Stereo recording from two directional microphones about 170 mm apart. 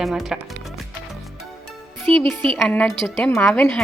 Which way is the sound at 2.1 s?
35° right (ahead or behind).